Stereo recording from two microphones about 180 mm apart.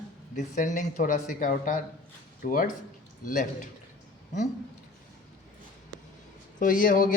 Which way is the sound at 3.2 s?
45° left (ahead or behind).